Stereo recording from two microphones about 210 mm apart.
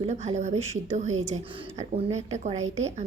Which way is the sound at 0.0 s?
30° right (ahead or behind).